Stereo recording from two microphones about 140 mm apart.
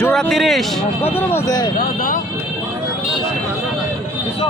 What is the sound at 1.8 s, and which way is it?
Speech, 75° left (ahead or behind).